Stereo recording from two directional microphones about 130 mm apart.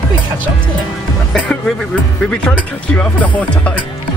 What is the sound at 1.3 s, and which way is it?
Speech, 5° left (ahead or behind).